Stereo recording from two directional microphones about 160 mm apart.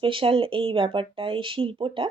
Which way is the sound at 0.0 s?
35° right (ahead or behind).